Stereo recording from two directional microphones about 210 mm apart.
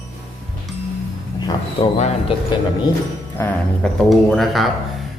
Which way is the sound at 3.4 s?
5° left (ahead or behind).